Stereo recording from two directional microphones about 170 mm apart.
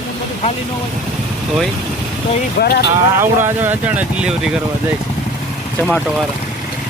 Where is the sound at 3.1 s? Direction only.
15° right (ahead or behind).